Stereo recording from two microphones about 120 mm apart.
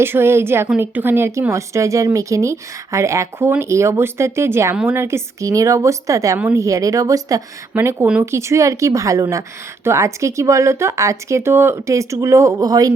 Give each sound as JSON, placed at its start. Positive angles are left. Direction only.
{"t": 0.0, "sound": "speech", "side_deg": -20}
{"t": 7.7, "sound": "speech", "side_deg": -15}
{"t": 8.2, "sound": "speech", "side_deg": -25}